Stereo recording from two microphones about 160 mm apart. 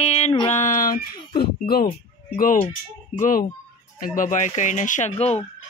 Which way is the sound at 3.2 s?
55° left (ahead or behind).